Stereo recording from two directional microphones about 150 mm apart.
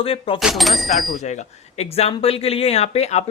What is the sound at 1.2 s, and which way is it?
Speech, 50° left (ahead or behind).